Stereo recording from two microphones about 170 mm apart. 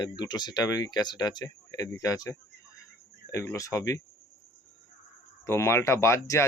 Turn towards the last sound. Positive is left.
turn(degrees=15)  # may be behind; listen again after turning